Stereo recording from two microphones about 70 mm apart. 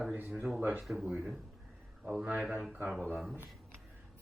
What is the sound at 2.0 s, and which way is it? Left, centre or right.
A man's voice, centre.